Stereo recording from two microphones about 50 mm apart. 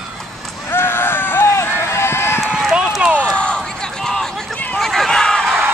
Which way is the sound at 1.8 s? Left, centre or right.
Left.